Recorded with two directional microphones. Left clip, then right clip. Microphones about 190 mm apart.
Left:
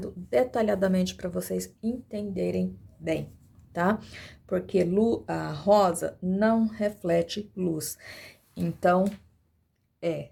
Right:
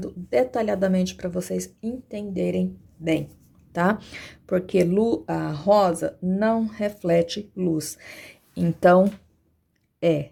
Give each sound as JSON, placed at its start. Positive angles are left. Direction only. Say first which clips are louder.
{"t": 0.0, "sound": "speech", "louder": "right 3 dB", "side_deg": -5}
{"t": 8.5, "sound": "speech", "louder": "right 7 dB", "side_deg": -30}